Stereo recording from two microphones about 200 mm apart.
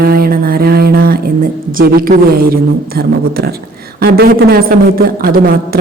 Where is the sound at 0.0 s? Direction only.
50° right (ahead or behind).